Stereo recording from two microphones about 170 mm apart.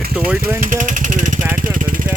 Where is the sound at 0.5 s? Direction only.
50° right (ahead or behind).